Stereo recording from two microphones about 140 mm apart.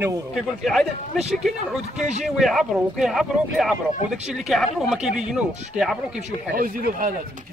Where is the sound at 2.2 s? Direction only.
Centre (ahead or behind).